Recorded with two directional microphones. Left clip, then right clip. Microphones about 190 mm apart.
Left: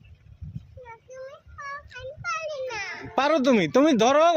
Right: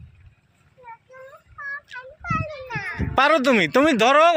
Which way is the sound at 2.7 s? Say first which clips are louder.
Right 3 dB; 35° left (ahead or behind).